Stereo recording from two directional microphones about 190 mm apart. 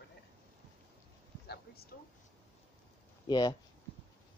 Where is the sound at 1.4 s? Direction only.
55° left (ahead or behind).